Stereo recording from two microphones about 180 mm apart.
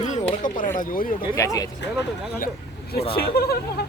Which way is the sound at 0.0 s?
40° left (ahead or behind).